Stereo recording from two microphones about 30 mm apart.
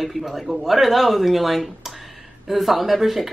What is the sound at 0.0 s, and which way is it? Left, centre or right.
A woman's voice, centre.